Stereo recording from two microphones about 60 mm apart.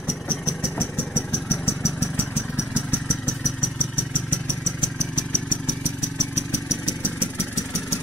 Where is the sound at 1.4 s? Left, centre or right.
Left.